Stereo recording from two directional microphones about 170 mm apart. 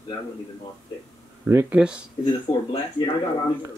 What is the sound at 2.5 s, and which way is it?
Speech, 30° left (ahead or behind).